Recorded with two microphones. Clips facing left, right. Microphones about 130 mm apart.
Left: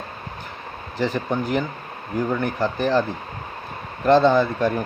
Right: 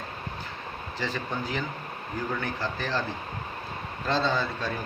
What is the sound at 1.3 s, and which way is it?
Speech, 55° left (ahead or behind).